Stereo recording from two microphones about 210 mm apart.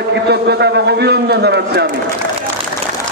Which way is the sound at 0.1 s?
55° right (ahead or behind).